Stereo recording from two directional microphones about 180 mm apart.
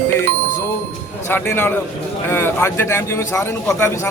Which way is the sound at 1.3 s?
10° left (ahead or behind).